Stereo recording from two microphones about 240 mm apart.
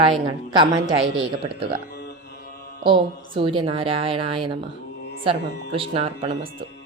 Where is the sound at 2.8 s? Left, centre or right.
Right.